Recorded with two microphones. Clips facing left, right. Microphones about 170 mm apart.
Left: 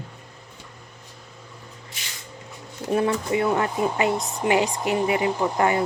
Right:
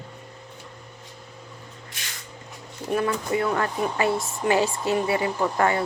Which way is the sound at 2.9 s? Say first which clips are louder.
Left 2 dB; 25° left (ahead or behind).